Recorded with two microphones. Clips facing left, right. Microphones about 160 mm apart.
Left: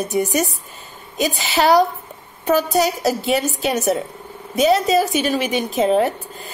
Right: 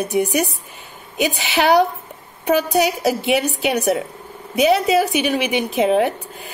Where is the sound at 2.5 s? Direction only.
15° right (ahead or behind).